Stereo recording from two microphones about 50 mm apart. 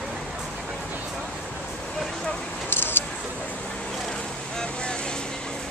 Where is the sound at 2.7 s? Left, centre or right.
Left.